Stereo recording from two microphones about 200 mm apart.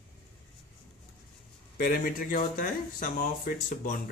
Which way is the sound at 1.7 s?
45° left (ahead or behind).